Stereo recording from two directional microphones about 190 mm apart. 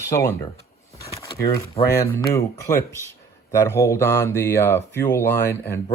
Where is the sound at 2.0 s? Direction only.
15° left (ahead or behind).